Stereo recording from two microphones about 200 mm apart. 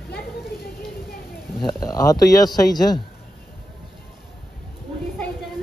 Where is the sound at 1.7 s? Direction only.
15° left (ahead or behind).